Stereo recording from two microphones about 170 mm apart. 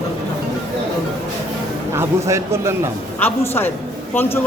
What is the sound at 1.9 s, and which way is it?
A man's voice, 15° right (ahead or behind).